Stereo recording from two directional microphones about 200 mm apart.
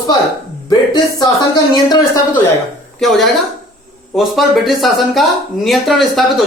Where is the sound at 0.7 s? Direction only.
20° left (ahead or behind).